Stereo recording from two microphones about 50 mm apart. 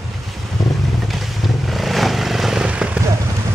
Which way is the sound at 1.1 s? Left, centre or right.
Centre.